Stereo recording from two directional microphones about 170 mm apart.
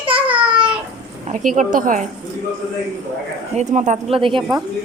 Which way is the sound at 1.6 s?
50° right (ahead or behind).